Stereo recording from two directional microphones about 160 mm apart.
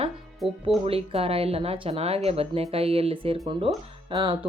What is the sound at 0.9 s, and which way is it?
Speech, 35° right (ahead or behind).